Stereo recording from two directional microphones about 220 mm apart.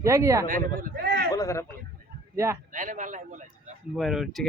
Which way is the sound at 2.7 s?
35° right (ahead or behind).